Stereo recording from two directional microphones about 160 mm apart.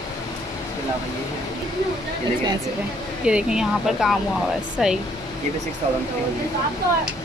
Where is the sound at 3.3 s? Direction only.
5° right (ahead or behind).